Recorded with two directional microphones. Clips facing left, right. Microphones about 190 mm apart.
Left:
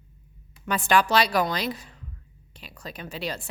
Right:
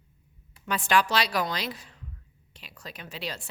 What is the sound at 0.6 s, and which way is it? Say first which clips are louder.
A woman's voice: left 3 dB; 45° left (ahead or behind).